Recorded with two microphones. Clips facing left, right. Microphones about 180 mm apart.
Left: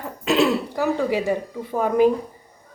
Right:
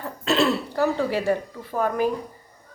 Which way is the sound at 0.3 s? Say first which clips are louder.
Left 2 dB; 15° left (ahead or behind).